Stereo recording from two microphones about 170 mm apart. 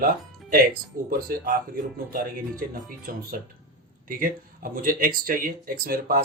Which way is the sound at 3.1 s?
55° right (ahead or behind).